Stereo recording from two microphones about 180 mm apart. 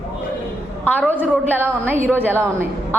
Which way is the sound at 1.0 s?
10° right (ahead or behind).